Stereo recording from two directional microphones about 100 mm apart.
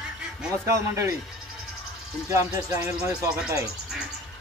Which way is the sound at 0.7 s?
30° right (ahead or behind).